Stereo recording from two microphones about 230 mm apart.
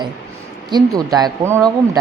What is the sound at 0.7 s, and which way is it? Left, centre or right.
Speech, centre.